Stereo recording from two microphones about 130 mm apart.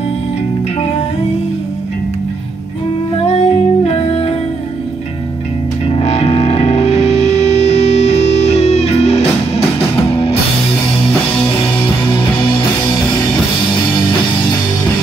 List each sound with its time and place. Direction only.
3.3 s music: 55° left (ahead or behind)
5.9 s music: 55° left (ahead or behind)
12.1 s music: 40° left (ahead or behind)